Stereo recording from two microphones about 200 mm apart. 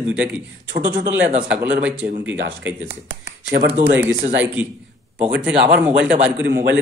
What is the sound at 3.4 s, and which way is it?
Speech, 40° right (ahead or behind).